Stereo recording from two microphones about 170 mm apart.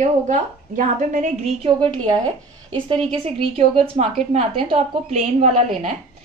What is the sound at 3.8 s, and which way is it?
A woman's voice, 40° right (ahead or behind).